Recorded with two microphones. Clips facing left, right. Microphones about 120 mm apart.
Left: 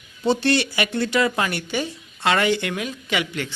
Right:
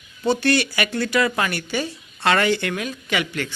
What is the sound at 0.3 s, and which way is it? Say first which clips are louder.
Speech: even; 25° left (ahead or behind).